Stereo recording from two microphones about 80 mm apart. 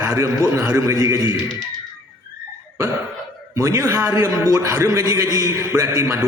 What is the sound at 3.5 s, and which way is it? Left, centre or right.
Speech, right.